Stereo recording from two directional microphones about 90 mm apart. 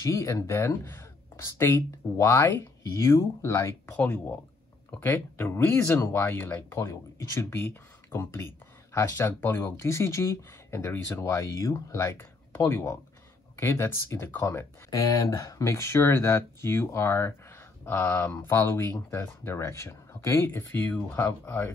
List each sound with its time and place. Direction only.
0.0 s speech: 35° left (ahead or behind)
4.0 s speech: 15° left (ahead or behind)
6.7 s speech: 35° left (ahead or behind)
14.9 s speech: 35° left (ahead or behind)
18.9 s speech: 40° left (ahead or behind)